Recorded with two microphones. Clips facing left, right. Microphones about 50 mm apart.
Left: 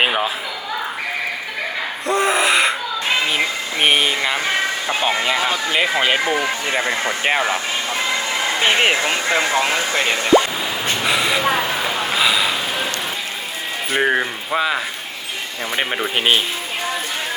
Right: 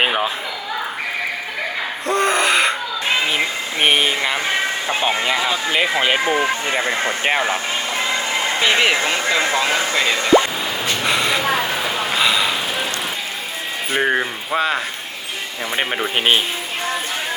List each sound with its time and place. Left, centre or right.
0.0 s a sound: centre
2.0 s a sound: centre
5.7 s speech: centre
6.1 s speech: centre
7.3 s speech: centre
8.4 s a sound: right
8.6 s speech: left
11.0 s speech: centre
11.9 s snort: centre
13.9 s speech: centre